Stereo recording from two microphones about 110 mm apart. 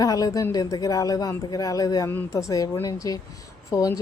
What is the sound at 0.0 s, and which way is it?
Speech, 35° left (ahead or behind).